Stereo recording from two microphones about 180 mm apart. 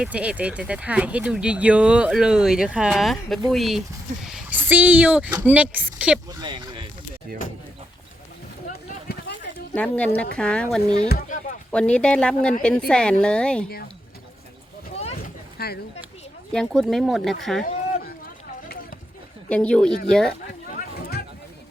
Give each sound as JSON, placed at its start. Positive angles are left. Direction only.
{"t": 0.0, "sound": "speech", "side_deg": -5}
{"t": 6.2, "sound": "speech", "side_deg": -20}
{"t": 8.6, "sound": "a sound", "side_deg": 60}
{"t": 9.7, "sound": "speech", "side_deg": 5}
{"t": 11.1, "sound": "a sound", "side_deg": 55}
{"t": 11.7, "sound": "speech", "side_deg": 5}
{"t": 15.5, "sound": "speech", "side_deg": 60}
{"t": 16.5, "sound": "speech", "side_deg": 5}
{"t": 19.5, "sound": "speech", "side_deg": 5}